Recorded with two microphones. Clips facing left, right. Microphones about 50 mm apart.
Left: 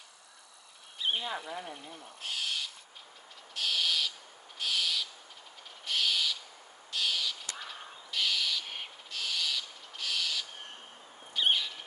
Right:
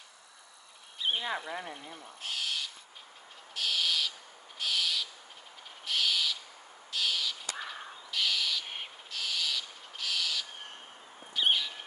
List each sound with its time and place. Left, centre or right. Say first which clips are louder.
0.9 s a sound: even; centre
1.2 s speech: right 2 dB; right
2.0 s owl: even; centre
11.3 s bird: even; centre